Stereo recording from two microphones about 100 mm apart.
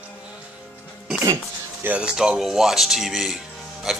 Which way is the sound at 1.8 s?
10° right (ahead or behind).